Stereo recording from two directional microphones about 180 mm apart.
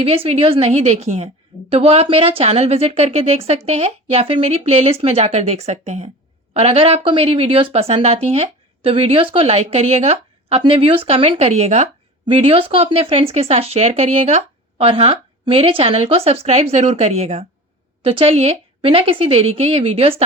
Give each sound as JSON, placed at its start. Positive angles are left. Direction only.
{"t": 0.0, "sound": "speech", "side_deg": -30}